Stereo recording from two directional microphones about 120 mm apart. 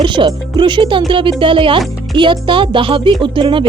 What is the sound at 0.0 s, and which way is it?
Speech, 40° right (ahead or behind).